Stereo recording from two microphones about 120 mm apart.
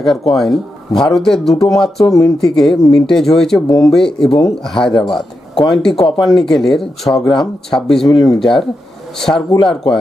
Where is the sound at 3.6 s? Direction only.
30° left (ahead or behind).